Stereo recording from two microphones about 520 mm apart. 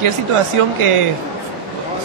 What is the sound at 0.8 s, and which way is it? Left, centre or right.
Speech, right.